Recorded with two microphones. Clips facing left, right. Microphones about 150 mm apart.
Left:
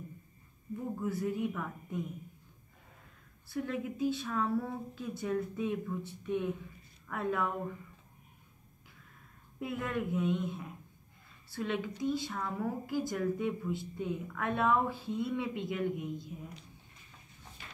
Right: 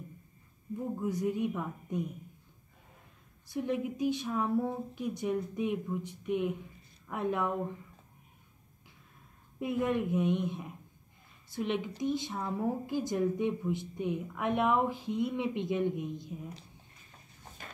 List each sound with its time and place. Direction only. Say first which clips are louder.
1.0 s a woman's voice: right 2 dB; 20° right (ahead or behind)
3.4 s a woman's voice: right 3 dB; 20° right (ahead or behind)
9.6 s a woman's voice: right 5 dB; 20° right (ahead or behind)